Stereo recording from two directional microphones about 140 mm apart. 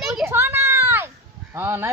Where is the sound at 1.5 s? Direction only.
15° right (ahead or behind).